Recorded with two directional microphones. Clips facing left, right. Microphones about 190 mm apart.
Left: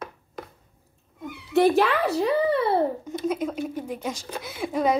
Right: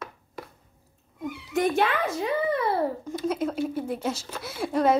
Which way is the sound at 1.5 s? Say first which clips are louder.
Left 5 dB; 35° left (ahead or behind).